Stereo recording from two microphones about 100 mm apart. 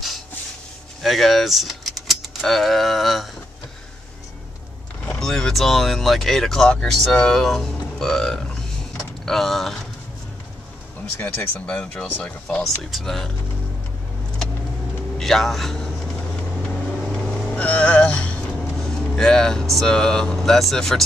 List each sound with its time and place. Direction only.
1.0 s speech: centre (ahead or behind)
5.0 s speech: 10° left (ahead or behind)
11.1 s speech: 20° left (ahead or behind); by 13.3 s 5° left (ahead or behind)
15.1 s a man's voice: 5° left (ahead or behind)
17.0 s vehicle: 5° left (ahead or behind)
18.8 s speech: 5° left (ahead or behind)